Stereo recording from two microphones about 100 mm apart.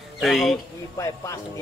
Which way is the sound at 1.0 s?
30° left (ahead or behind).